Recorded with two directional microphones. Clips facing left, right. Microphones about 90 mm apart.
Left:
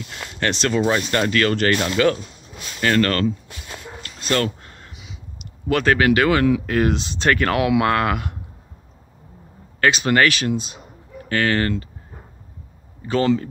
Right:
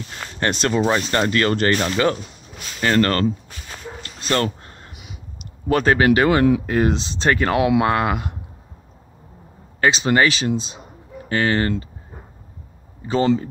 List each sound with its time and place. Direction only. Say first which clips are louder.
0.7 s speech: even; 20° right (ahead or behind)
4.0 s dog: even; 35° right (ahead or behind)
4.9 s a sound: right 1 dB; 55° right (ahead or behind)
5.4 s speech: right 1 dB; 35° right (ahead or behind)
9.8 s speech: even; 25° right (ahead or behind)
13.1 s speech: right 1 dB; 25° right (ahead or behind)